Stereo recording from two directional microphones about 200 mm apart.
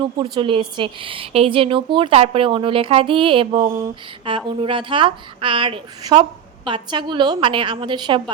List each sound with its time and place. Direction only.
0.0 s a woman's voice: 25° right (ahead or behind)